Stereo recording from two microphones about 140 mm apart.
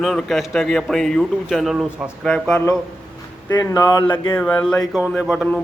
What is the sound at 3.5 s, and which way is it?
Speech, 25° left (ahead or behind).